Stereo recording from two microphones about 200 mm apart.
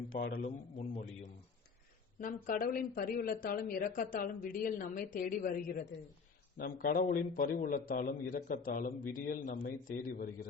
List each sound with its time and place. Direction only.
0.1 s a man's voice: 50° left (ahead or behind)
0.8 s a man's voice: 35° left (ahead or behind)